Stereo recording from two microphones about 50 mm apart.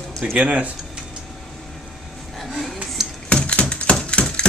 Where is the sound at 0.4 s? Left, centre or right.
Right.